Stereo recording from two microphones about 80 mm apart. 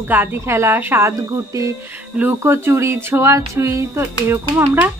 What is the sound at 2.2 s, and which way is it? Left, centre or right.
Speech, right.